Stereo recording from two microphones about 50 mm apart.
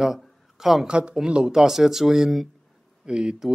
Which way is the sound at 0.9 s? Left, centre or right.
Centre.